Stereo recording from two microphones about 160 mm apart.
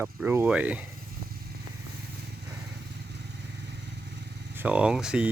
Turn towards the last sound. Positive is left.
turn(degrees=-5)  # may be behind; listen again after turning